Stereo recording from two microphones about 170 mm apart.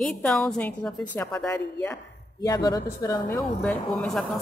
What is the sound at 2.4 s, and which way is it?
Speech, 25° left (ahead or behind).